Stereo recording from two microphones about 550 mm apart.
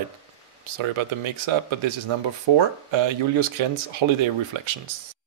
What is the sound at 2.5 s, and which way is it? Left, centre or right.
Speech, right.